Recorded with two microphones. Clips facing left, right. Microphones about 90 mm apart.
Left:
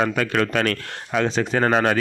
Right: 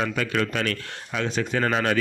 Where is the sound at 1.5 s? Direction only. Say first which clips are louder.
Left 4 dB; 40° left (ahead or behind).